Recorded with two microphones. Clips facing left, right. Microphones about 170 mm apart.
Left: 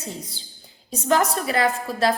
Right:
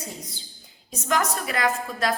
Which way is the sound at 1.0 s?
30° left (ahead or behind).